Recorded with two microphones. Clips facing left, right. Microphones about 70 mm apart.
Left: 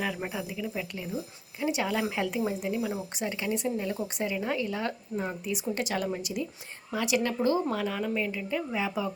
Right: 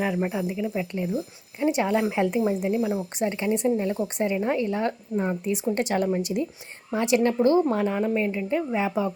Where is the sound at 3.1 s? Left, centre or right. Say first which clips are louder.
Right 7 dB; right.